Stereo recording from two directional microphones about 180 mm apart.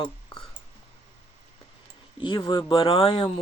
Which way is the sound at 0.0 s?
25° left (ahead or behind).